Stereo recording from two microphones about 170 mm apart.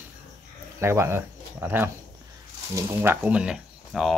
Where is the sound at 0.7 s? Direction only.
15° right (ahead or behind); by 4.2 s centre (ahead or behind).